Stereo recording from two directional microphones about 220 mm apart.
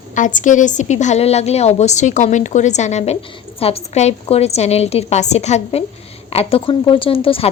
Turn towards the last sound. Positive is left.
turn(degrees=25)  # may be behind; listen again after turning